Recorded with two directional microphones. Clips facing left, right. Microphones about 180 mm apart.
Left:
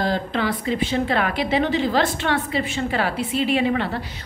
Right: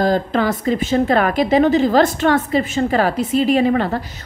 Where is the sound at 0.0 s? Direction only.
45° right (ahead or behind).